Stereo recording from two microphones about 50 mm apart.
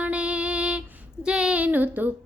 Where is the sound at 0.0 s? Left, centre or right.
Right.